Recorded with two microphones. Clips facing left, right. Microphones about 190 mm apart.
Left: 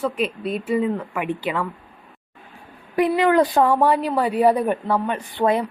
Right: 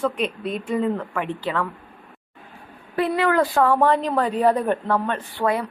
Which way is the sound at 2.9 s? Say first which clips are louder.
Left 3 dB; 15° left (ahead or behind).